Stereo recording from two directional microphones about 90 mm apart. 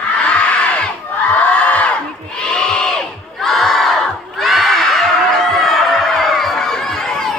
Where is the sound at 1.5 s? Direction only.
15° left (ahead or behind).